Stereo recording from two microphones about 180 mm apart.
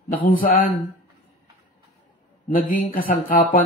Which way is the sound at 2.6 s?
50° left (ahead or behind).